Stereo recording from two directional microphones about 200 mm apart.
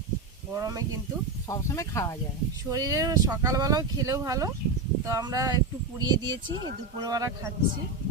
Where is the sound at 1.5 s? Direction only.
15° left (ahead or behind).